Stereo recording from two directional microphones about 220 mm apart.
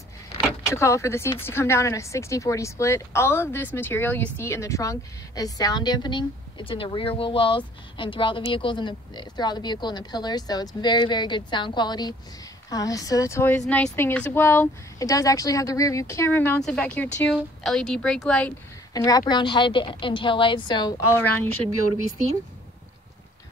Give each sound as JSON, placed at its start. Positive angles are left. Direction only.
{"t": 0.7, "sound": "a woman's voice", "side_deg": 15}
{"t": 18.9, "sound": "speech", "side_deg": 15}
{"t": 21.1, "sound": "speech", "side_deg": 10}